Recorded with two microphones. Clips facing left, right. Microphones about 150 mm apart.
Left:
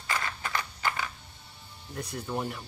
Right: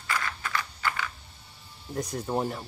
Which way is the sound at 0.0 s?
25° left (ahead or behind).